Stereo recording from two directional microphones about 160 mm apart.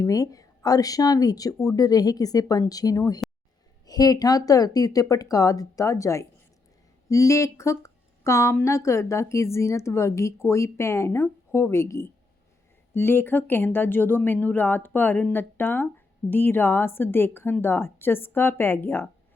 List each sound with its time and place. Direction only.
0.0 s speech: 20° left (ahead or behind)